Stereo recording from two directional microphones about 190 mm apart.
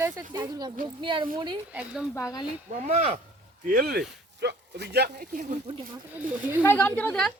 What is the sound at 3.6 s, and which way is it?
Speech, 50° right (ahead or behind).